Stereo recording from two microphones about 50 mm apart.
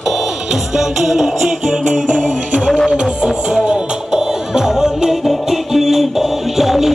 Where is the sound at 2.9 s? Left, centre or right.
Centre.